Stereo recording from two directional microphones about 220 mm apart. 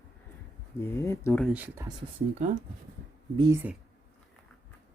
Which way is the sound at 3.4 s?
15° right (ahead or behind).